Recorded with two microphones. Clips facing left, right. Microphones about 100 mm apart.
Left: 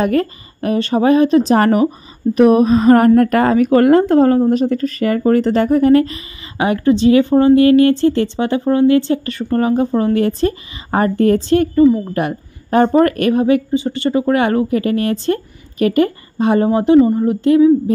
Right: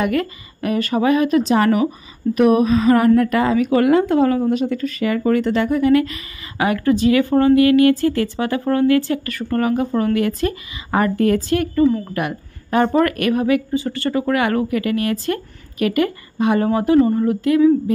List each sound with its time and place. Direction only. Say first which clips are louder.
0.0 s a woman's voice: left 4 dB; 35° left (ahead or behind)
1.5 s a woman's voice: left 3 dB; 40° left (ahead or behind)
11.8 s speech: left 4 dB; 10° left (ahead or behind)
12.1 s speech: left 4 dB; 30° left (ahead or behind)